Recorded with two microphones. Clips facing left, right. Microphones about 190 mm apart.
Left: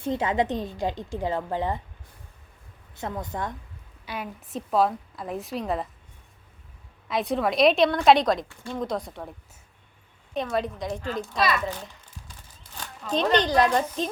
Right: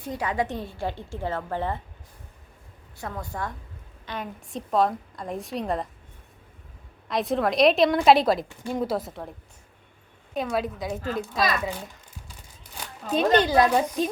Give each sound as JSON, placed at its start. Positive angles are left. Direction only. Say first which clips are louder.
{"t": 0.0, "sound": "a woman's voice", "louder": "left 3 dB", "side_deg": 25}
{"t": 3.0, "sound": "a woman's voice", "louder": "left 2 dB", "side_deg": 20}
{"t": 4.0, "sound": "a woman's voice", "louder": "even", "side_deg": 10}
{"t": 7.1, "sound": "a woman's voice", "louder": "right 1 dB", "side_deg": 0}
{"t": 10.3, "sound": "a woman's voice", "louder": "even", "side_deg": -5}
{"t": 12.7, "sound": "speech", "louder": "right 1 dB", "side_deg": -10}